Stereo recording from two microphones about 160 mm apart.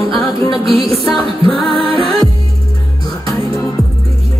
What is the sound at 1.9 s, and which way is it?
Music, 25° left (ahead or behind).